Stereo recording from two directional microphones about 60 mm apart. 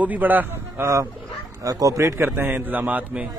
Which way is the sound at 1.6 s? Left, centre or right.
Right.